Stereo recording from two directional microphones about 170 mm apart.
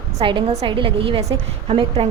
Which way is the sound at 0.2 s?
30° right (ahead or behind).